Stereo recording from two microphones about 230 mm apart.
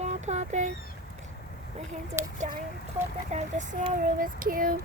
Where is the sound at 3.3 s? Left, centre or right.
Right.